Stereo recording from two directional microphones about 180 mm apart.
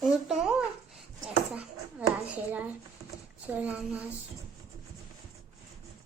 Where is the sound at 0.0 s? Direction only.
Centre (ahead or behind).